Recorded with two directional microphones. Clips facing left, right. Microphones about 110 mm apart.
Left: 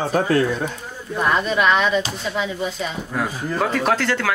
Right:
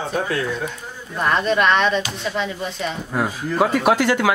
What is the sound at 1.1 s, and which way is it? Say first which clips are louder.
Speech: right 1 dB; 5° left (ahead or behind).